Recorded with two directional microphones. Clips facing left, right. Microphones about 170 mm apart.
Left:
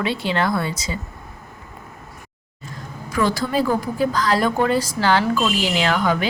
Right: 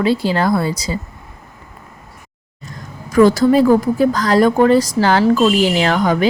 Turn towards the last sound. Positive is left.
turn(degrees=-40)  # may be behind; listen again after turning